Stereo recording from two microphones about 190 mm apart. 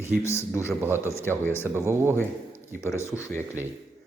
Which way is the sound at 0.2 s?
15° left (ahead or behind).